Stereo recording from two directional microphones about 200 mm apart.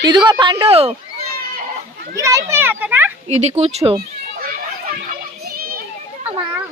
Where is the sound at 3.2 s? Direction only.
35° right (ahead or behind).